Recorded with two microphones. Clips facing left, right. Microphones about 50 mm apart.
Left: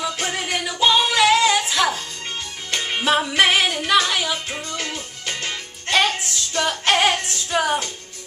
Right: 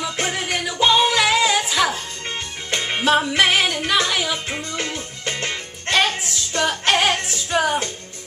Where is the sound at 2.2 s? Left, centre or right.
Right.